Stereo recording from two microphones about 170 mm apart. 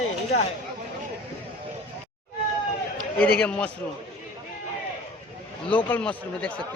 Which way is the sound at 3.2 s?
5° left (ahead or behind).